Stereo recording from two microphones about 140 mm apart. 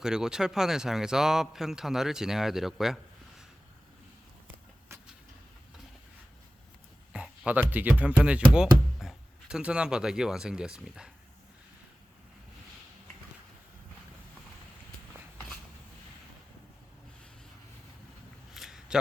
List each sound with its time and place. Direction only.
0.0 s speech: 5° right (ahead or behind)
4.9 s vehicle: 20° right (ahead or behind)
7.1 s speech: 10° right (ahead or behind)
18.5 s a sound: 5° right (ahead or behind)